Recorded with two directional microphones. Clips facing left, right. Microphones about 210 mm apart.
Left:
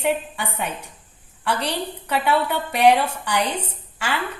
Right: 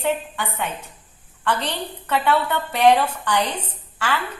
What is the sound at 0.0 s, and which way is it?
A woman's voice, 15° left (ahead or behind).